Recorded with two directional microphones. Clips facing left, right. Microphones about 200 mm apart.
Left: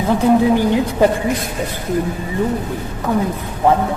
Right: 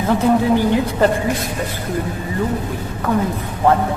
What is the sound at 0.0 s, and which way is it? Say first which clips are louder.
Speech: left 2 dB; 15° left (ahead or behind).